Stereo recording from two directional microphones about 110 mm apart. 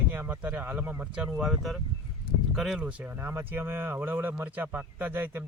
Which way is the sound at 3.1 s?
20° right (ahead or behind).